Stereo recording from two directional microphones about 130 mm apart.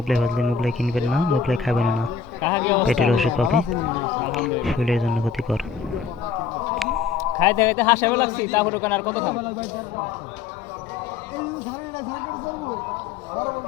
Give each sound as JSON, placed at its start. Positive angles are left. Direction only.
{"t": 0.1, "sound": "speech", "side_deg": 0}
{"t": 2.4, "sound": "a man's voice", "side_deg": 15}
{"t": 2.9, "sound": "speech", "side_deg": 0}
{"t": 6.7, "sound": "a sound", "side_deg": 0}
{"t": 7.2, "sound": "a man's voice", "side_deg": 25}